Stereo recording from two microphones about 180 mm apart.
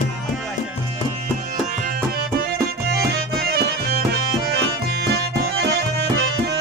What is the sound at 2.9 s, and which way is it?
Music, 60° right (ahead or behind).